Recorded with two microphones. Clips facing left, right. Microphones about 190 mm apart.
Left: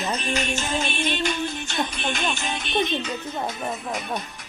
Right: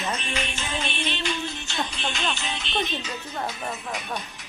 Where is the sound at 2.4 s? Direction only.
50° left (ahead or behind).